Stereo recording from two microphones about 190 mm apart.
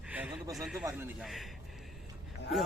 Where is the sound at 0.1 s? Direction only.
10° right (ahead or behind).